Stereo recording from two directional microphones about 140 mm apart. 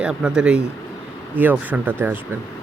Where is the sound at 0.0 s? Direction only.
5° right (ahead or behind).